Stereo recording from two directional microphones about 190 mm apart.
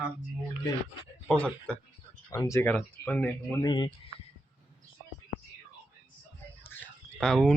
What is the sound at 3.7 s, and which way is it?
Speech, 25° left (ahead or behind).